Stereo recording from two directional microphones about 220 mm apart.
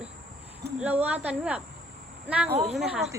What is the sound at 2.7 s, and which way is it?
Speech, centre (ahead or behind).